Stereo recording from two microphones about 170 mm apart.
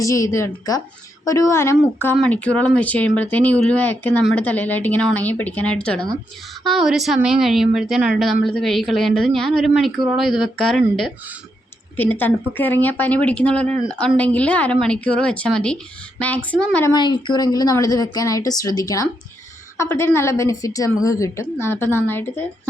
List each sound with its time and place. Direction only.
0.0 s a woman's voice: 20° left (ahead or behind)
16.9 s a woman's voice: 25° left (ahead or behind)